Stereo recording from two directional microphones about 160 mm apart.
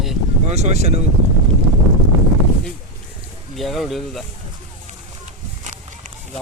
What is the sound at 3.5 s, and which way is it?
Speech, centre (ahead or behind).